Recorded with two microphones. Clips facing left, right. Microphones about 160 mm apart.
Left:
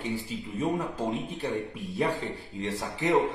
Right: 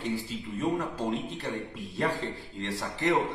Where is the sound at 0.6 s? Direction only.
20° left (ahead or behind).